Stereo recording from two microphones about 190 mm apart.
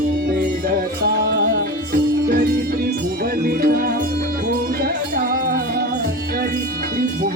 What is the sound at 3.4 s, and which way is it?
Music, 50° right (ahead or behind).